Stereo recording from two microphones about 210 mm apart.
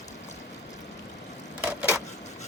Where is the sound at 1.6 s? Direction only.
5° right (ahead or behind).